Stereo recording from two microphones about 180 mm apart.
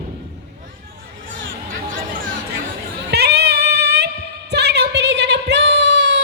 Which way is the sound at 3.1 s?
65° right (ahead or behind).